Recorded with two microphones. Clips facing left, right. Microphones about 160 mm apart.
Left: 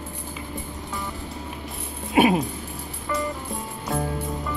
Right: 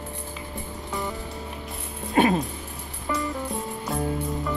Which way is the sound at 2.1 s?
15° left (ahead or behind).